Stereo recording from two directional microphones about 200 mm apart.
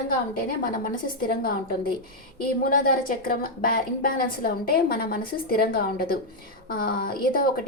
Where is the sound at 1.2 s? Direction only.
50° left (ahead or behind).